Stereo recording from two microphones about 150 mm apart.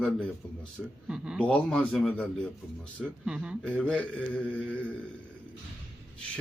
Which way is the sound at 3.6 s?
5° left (ahead or behind).